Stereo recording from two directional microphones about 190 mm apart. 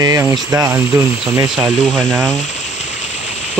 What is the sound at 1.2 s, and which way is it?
Speech, 5° right (ahead or behind).